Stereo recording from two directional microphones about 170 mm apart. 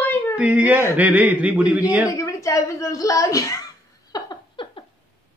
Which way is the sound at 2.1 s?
20° left (ahead or behind).